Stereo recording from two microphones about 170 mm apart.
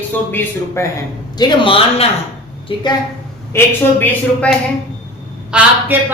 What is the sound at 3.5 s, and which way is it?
Speech, 10° left (ahead or behind).